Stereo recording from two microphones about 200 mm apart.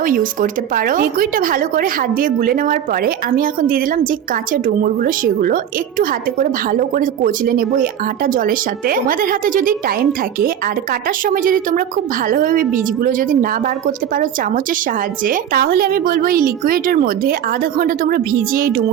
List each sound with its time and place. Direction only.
0.0 s a woman's voice: 45° right (ahead or behind)